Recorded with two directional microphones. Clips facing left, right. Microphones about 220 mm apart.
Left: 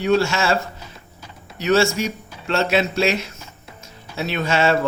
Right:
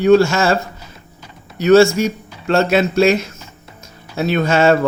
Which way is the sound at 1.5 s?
45° right (ahead or behind).